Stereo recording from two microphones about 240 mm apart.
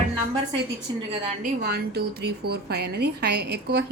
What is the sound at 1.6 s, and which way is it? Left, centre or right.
A woman's voice, right.